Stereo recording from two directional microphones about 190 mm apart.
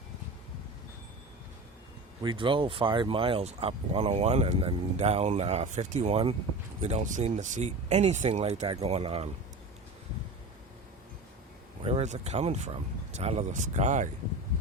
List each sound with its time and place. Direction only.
2.2 s speech: 25° right (ahead or behind)
11.8 s speech: 30° right (ahead or behind)